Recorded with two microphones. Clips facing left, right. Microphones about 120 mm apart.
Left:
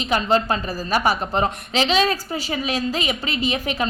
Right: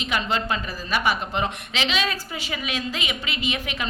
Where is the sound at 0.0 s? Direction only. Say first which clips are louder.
Left 6 dB; 35° left (ahead or behind).